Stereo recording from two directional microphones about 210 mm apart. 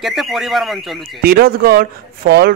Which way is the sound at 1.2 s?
45° right (ahead or behind).